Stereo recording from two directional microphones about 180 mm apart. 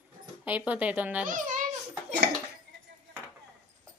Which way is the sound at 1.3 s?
45° right (ahead or behind).